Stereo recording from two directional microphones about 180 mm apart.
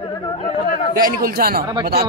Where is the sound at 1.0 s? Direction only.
55° right (ahead or behind).